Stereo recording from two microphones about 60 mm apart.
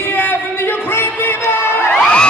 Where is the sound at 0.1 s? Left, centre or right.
Left.